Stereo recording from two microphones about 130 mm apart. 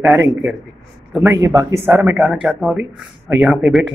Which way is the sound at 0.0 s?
15° right (ahead or behind).